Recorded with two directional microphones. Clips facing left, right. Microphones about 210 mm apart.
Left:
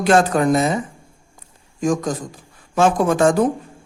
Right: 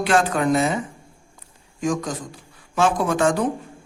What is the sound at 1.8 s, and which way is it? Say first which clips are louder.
A man's voice: left 4 dB; 45° left (ahead or behind).